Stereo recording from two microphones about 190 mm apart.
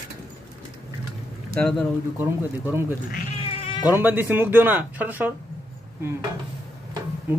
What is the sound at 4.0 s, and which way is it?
Speech, 10° right (ahead or behind).